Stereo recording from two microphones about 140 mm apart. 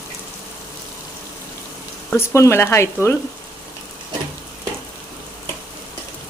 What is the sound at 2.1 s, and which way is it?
Speech, 20° left (ahead or behind).